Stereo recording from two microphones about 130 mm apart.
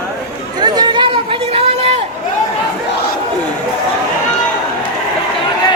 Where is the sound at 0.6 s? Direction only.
35° right (ahead or behind).